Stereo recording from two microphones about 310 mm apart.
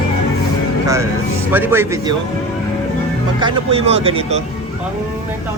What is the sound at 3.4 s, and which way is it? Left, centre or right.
Speech, centre.